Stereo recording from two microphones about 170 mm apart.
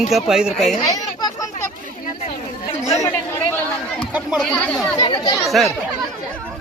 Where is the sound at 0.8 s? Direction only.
20° left (ahead or behind).